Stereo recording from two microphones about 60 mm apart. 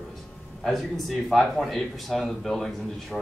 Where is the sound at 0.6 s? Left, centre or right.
Centre.